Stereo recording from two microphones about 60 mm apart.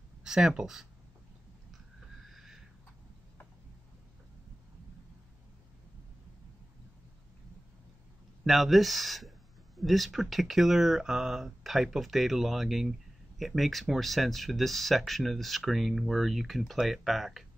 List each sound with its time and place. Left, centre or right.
0.2 s speech: centre
2.3 s a sound: centre
8.5 s speech: centre